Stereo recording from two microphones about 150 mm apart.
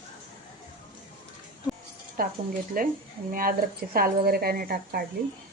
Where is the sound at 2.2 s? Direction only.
75° right (ahead or behind).